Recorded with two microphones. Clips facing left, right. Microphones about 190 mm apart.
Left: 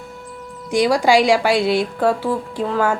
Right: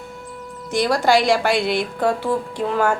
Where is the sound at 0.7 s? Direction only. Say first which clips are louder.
Left 2 dB; 10° left (ahead or behind).